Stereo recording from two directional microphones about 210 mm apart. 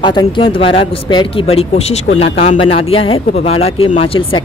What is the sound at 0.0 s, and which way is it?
Speech, 20° left (ahead or behind).